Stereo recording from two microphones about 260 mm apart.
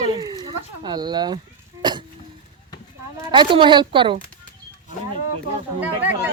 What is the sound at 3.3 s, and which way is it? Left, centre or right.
Speech, centre.